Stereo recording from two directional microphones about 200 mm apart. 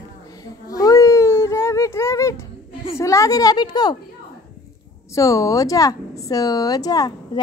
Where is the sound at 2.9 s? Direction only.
15° left (ahead or behind).